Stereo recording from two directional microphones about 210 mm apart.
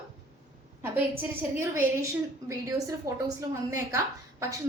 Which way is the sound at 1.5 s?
15° right (ahead or behind).